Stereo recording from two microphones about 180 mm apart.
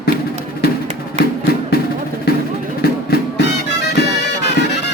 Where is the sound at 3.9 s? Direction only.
70° left (ahead or behind).